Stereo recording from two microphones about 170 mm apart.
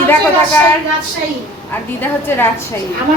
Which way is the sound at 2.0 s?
15° left (ahead or behind).